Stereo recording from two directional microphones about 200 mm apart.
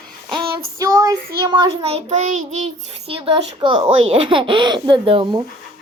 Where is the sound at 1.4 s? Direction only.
20° right (ahead or behind).